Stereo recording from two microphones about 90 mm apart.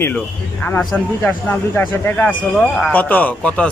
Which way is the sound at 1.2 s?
20° left (ahead or behind).